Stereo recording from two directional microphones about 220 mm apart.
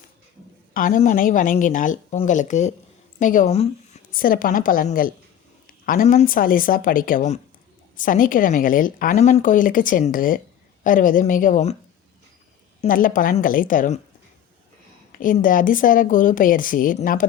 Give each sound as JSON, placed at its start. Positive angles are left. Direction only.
{"t": 0.7, "sound": "speech", "side_deg": 40}
{"t": 12.8, "sound": "speech", "side_deg": 40}
{"t": 15.1, "sound": "speech", "side_deg": 40}